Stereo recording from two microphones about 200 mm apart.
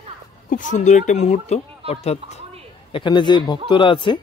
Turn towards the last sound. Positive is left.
turn(degrees=25)  # may be behind; listen again after turning